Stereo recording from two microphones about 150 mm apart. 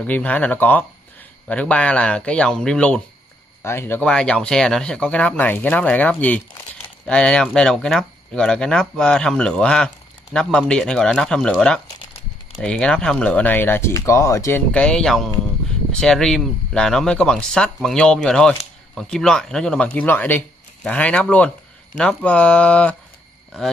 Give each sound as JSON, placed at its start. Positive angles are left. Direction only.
{"t": 0.0, "sound": "speech", "side_deg": 10}
{"t": 14.7, "sound": "speech", "side_deg": 5}